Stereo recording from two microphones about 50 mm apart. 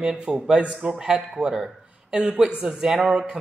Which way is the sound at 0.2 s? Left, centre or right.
Centre.